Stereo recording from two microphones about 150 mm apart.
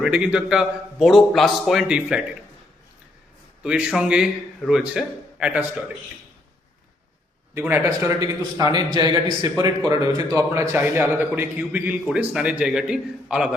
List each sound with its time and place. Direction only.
0.0 s a man's voice: 5° right (ahead or behind)
3.6 s a man's voice: 5° right (ahead or behind)
7.9 s a man's voice: 25° right (ahead or behind); by 13.5 s 5° right (ahead or behind)